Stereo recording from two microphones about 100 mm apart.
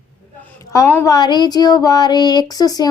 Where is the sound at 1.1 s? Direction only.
45° left (ahead or behind).